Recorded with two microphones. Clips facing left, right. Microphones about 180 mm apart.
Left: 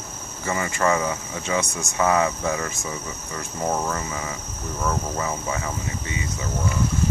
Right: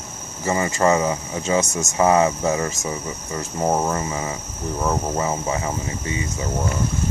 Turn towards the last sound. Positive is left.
turn(degrees=-25)  # may be behind; listen again after turning